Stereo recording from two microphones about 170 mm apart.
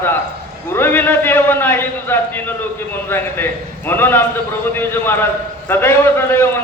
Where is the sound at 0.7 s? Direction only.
15° left (ahead or behind).